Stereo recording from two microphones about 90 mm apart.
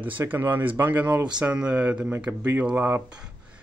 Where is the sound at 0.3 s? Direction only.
20° right (ahead or behind).